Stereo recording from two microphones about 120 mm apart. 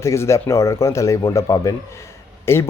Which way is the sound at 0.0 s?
25° left (ahead or behind).